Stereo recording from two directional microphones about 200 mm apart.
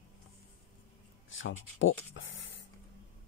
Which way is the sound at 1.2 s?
75° left (ahead or behind).